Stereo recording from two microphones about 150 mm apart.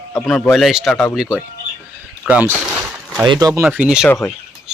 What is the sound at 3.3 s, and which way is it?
Speech, 25° right (ahead or behind).